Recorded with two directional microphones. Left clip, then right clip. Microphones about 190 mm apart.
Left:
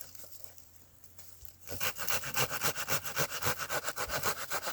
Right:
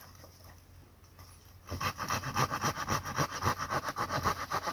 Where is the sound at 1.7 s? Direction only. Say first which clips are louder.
Right 2 dB; 30° left (ahead or behind).